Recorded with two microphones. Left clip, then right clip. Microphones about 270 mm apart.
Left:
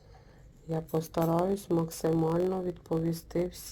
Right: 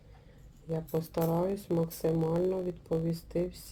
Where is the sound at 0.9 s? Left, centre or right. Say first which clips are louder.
Left 2 dB; left.